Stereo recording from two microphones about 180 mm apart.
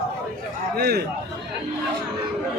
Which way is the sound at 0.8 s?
60° right (ahead or behind).